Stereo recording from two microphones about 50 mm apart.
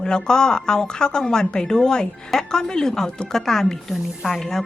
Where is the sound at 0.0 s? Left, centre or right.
Centre.